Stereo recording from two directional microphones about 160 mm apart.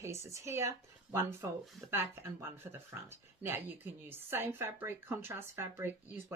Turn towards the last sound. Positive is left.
turn(degrees=-15)  # may be behind; listen again after turning